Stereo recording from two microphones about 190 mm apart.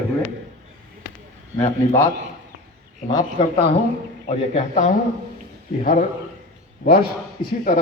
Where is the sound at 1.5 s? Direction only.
15° left (ahead or behind).